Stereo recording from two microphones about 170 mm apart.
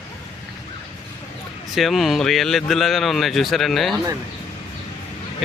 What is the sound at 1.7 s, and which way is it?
A man's voice, centre (ahead or behind).